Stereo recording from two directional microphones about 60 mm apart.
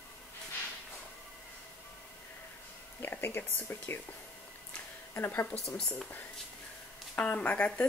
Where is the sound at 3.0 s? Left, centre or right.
Left.